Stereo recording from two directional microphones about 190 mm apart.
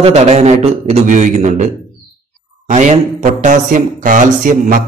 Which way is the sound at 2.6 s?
40° right (ahead or behind).